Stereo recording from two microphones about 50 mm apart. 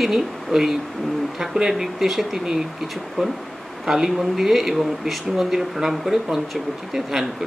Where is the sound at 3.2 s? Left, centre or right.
Centre.